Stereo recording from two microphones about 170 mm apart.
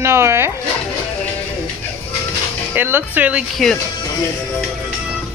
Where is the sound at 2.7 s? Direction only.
10° right (ahead or behind).